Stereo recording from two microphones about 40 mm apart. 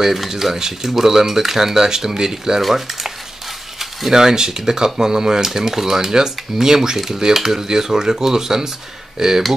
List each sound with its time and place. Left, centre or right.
0.0 s speech: centre
4.1 s speech: centre